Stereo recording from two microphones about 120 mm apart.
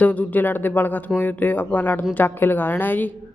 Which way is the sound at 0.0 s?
15° left (ahead or behind).